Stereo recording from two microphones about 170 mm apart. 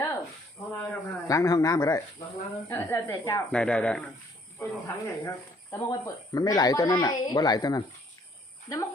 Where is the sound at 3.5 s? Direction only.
5° left (ahead or behind).